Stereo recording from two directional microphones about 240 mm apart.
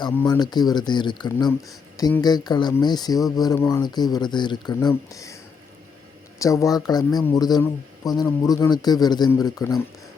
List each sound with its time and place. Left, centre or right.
0.0 s speech: centre
6.4 s speech: centre